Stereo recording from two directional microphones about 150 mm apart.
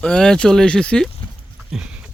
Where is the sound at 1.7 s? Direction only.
5° right (ahead or behind).